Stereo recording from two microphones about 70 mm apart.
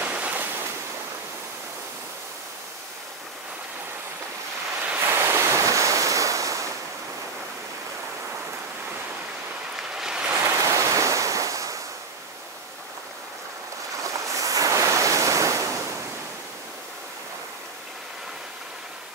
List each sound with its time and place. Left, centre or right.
0.0 s waves: right
5.0 s waves: right
9.8 s a sound: centre
10.3 s waves: right
14.0 s waves: right